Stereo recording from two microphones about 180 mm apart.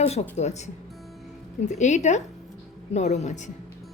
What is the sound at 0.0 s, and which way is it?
A woman's voice, 35° left (ahead or behind).